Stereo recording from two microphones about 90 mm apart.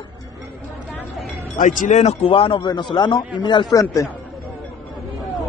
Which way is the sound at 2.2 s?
85° left.